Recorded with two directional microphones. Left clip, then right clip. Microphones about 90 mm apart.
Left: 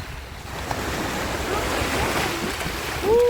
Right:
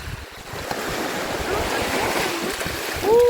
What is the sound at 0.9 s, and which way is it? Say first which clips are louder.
Waves: right 1 dB; 20° left (ahead or behind).